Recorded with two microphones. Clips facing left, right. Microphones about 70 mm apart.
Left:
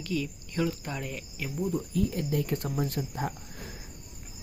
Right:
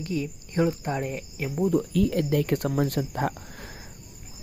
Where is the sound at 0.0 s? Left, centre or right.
Right.